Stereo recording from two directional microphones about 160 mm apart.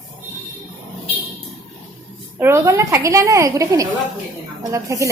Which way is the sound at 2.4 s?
15° right (ahead or behind).